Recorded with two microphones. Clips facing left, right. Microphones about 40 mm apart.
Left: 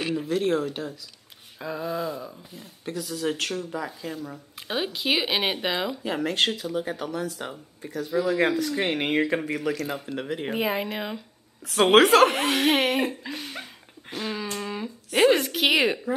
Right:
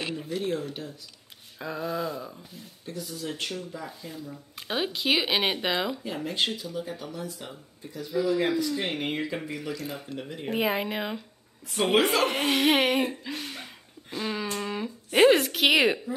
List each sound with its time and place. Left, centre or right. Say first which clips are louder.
0.1 s speech: left 9 dB; left
1.6 s speech: left 1 dB; centre
2.8 s speech: left 5 dB; left
3.3 s speech: left 6 dB; left
4.6 s speech: even; centre
6.0 s speech: left 4 dB; left
10.5 s speech: right 2 dB; centre
11.7 s speech: left 7 dB; left
12.4 s speech: left 1 dB; centre
14.5 s a sound: even; centre
15.1 s speech: right 1 dB; centre